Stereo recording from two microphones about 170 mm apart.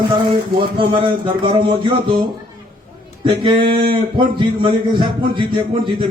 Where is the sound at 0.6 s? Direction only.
30° right (ahead or behind).